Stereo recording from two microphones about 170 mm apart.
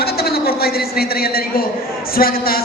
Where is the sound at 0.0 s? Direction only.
65° left (ahead or behind).